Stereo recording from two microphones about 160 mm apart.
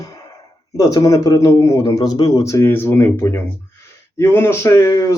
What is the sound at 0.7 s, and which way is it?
Speech, 20° left (ahead or behind).